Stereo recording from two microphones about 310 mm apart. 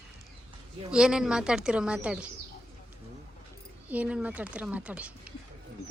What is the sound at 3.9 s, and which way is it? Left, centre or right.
A woman's voice, centre.